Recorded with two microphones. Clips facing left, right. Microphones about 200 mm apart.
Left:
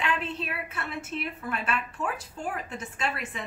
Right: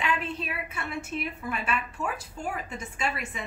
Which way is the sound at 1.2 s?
Centre (ahead or behind).